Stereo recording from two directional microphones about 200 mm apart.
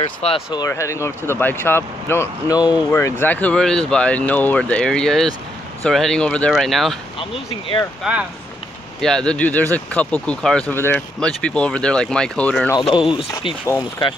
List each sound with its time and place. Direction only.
0.0 s speech: 25° left (ahead or behind); by 7.0 s centre (ahead or behind)
7.2 s speech: 25° left (ahead or behind)
8.0 s speech: 5° right (ahead or behind)
12.7 s speech: 20° left (ahead or behind)